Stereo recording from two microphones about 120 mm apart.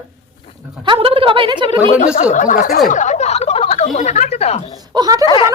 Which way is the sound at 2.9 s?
90° left.